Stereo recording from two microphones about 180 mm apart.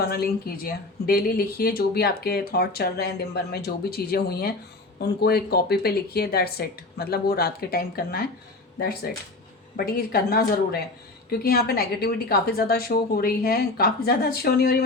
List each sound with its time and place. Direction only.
0.0 s speech: 60° left (ahead or behind)
9.7 s speech: 55° left (ahead or behind)